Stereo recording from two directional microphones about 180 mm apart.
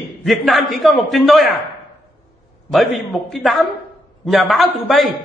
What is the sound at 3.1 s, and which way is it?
A man's voice, centre (ahead or behind).